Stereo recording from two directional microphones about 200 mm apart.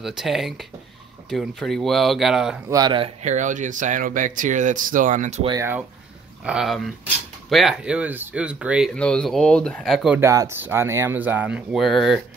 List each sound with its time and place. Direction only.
0.0 s speech: centre (ahead or behind)
2.7 s speech: 20° right (ahead or behind); by 5.5 s 35° right (ahead or behind)
5.5 s speech: 15° right (ahead or behind)
10.2 s speech: 15° right (ahead or behind)